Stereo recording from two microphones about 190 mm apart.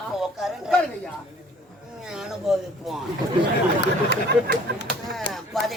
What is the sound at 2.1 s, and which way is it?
Speech, centre (ahead or behind).